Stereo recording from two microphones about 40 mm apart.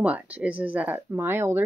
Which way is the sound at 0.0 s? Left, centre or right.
Right.